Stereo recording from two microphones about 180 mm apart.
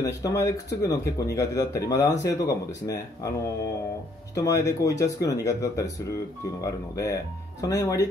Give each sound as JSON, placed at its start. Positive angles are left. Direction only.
{"t": 0.0, "sound": "speech", "side_deg": 20}
{"t": 4.4, "sound": "speech", "side_deg": 20}